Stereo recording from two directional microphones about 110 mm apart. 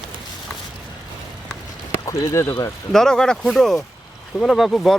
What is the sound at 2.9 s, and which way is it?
Speech, 5° left (ahead or behind).